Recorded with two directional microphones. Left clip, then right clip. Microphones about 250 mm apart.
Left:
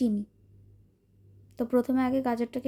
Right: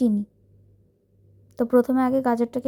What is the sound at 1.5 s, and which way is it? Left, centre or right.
A woman's voice, centre.